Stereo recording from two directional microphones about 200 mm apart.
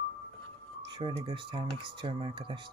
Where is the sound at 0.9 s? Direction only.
25° right (ahead or behind).